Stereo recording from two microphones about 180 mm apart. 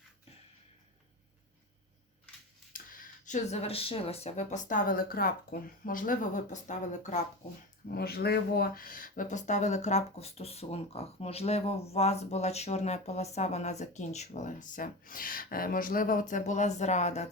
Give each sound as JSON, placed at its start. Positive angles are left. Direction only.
{"t": 2.7, "sound": "speech", "side_deg": 50}
{"t": 7.9, "sound": "speech", "side_deg": 60}